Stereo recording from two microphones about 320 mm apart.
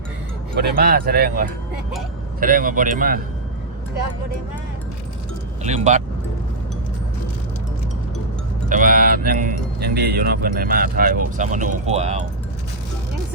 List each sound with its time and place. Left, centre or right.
0.5 s speech: right
5.6 s speech: right
8.7 s speech: right